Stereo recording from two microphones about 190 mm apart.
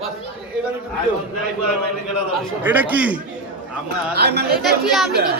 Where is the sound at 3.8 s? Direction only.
60° right (ahead or behind).